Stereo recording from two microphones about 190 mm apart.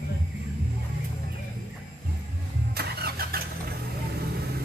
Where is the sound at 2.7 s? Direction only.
55° right (ahead or behind).